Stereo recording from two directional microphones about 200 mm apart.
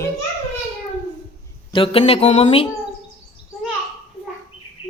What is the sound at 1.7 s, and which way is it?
A man's voice, 25° left (ahead or behind).